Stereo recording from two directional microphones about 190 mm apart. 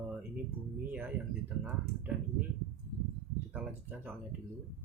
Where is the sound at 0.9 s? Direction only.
10° right (ahead or behind).